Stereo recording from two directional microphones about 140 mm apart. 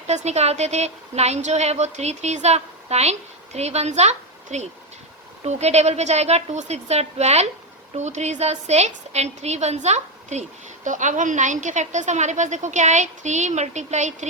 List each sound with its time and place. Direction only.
0.1 s a woman's voice: 55° right (ahead or behind)